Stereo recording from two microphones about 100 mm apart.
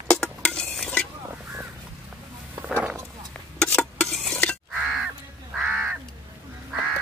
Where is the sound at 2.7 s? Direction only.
20° right (ahead or behind).